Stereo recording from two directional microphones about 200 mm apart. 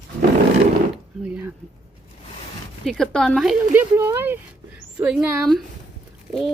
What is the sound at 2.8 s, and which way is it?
Speech, centre (ahead or behind).